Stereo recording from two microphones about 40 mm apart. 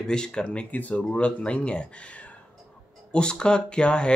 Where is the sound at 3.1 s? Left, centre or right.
Left.